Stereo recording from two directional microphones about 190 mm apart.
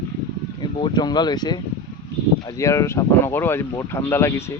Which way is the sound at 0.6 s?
20° left (ahead or behind).